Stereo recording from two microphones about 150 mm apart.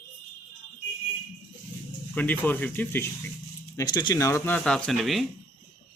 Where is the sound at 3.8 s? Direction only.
30° left (ahead or behind).